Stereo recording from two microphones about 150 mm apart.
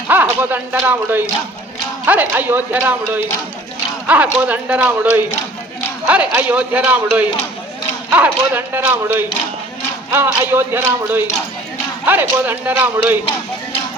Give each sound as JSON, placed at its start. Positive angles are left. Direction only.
{"t": 0.1, "sound": "a man's voice", "side_deg": -15}